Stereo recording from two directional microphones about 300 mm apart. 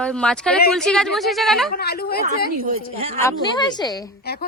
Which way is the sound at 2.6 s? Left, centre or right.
Centre.